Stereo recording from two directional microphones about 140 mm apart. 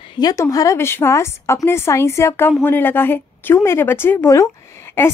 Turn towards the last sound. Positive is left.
turn(degrees=15)  # may be behind; listen again after turning